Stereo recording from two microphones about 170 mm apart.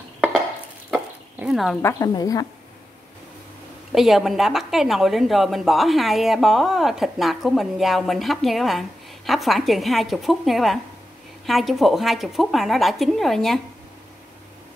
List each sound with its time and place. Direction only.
0.8 s chicken: 5° right (ahead or behind)
1.8 s a woman's voice: 15° left (ahead or behind)
3.9 s a woman's voice: centre (ahead or behind)